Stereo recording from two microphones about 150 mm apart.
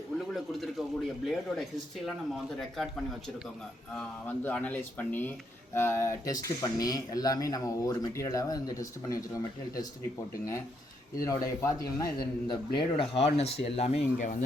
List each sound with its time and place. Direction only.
0.2 s a sound: centre (ahead or behind)
2.0 s a man's voice: centre (ahead or behind); by 9.8 s 20° left (ahead or behind)
11.3 s speech: 20° left (ahead or behind)
12.5 s speech: 35° left (ahead or behind); by 14.3 s 50° left (ahead or behind)